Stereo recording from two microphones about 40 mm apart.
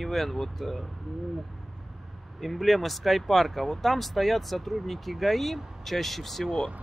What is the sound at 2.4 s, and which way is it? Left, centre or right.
Speech, centre.